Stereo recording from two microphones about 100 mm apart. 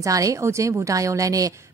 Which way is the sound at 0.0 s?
35° right (ahead or behind).